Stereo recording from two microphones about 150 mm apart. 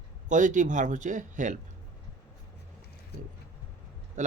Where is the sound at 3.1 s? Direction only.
90° left.